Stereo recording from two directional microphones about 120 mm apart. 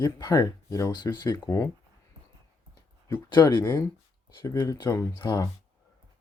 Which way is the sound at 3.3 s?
35° left (ahead or behind).